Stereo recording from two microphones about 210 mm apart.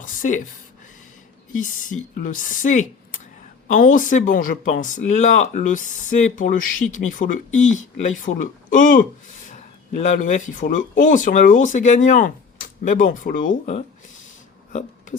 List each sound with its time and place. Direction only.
0.0 s speech: 40° left (ahead or behind)
1.5 s speech: 40° left (ahead or behind)
14.7 s a sound: 35° left (ahead or behind)